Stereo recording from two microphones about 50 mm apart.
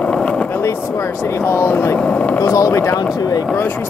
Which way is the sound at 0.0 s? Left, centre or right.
Left.